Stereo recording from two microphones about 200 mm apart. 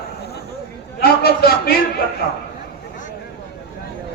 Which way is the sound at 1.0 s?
50° left (ahead or behind).